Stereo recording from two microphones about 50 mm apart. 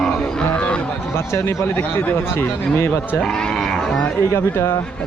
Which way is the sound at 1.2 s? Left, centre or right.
Left.